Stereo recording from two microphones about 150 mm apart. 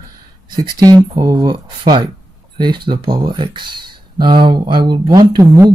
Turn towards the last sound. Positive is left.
turn(degrees=-25)  # may be behind; listen again after turning